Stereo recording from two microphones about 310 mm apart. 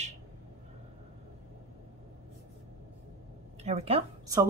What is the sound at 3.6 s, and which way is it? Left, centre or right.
Speech, right.